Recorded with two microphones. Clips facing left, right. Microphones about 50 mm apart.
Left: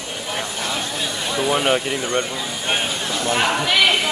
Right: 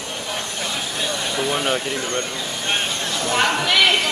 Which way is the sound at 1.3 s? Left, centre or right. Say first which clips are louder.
Left 4 dB; centre.